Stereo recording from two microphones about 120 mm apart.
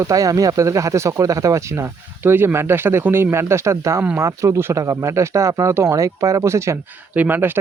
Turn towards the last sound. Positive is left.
turn(degrees=-15)  # may be behind; listen again after turning